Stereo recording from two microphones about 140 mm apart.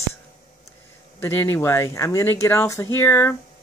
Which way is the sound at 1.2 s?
15° left (ahead or behind).